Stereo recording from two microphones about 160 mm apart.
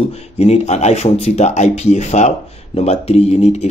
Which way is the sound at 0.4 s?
40° left (ahead or behind).